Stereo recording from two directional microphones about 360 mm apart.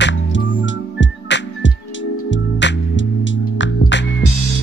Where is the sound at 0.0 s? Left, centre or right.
Left.